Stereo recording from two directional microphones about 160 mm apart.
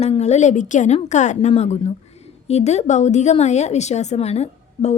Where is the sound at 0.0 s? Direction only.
40° left (ahead or behind).